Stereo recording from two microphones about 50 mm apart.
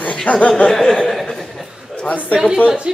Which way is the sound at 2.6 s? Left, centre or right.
Centre.